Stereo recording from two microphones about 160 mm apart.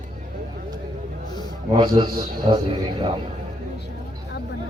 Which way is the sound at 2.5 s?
40° right (ahead or behind).